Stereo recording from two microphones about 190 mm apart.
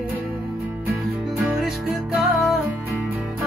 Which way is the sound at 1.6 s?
Centre (ahead or behind).